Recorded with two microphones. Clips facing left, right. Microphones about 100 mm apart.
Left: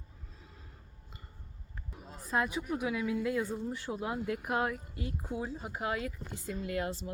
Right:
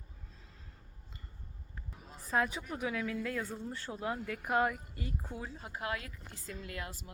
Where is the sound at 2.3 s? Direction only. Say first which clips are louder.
Left 1 dB; 5° left (ahead or behind).